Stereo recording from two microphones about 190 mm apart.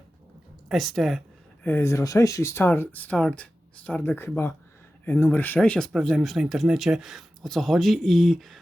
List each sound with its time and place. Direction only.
0.7 s speech: centre (ahead or behind)
1.6 s speech: 10° left (ahead or behind)